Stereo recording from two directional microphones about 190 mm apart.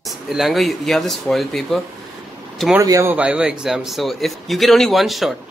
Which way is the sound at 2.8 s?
15° right (ahead or behind).